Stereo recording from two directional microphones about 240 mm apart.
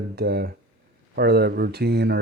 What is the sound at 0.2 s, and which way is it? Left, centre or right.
Speech, right.